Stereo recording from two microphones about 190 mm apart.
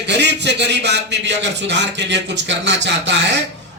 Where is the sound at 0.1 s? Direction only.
65° right (ahead or behind).